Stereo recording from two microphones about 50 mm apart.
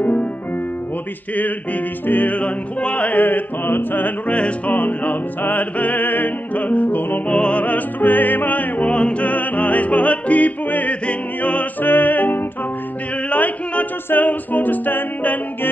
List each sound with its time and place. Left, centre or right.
0.0 s music: left
1.3 s music: left
3.1 s music: left
4.3 s music: left
4.6 s music: left
7.2 s music: left
8.9 s music: left
9.2 s music: left
11.8 s music: left